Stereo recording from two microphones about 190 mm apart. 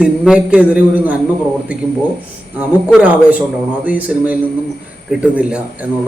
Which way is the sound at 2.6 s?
10° right (ahead or behind).